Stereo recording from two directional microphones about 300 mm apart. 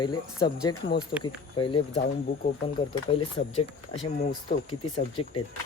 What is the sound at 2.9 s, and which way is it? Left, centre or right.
Speech, centre.